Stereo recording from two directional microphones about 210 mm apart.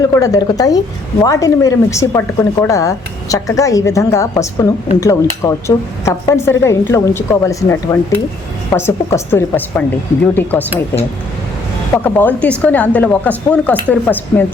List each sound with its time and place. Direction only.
0.1 s a woman's voice: 15° left (ahead or behind)
12.0 s a woman's voice: 10° left (ahead or behind)